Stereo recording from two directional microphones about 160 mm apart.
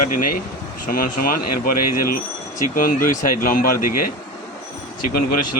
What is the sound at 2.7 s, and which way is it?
Speech, 60° left (ahead or behind).